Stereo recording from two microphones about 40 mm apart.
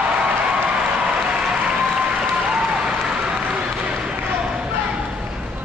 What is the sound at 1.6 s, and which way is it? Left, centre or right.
Applause, centre.